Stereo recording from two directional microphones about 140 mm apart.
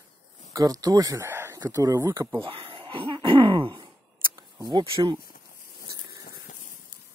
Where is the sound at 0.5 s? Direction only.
25° right (ahead or behind).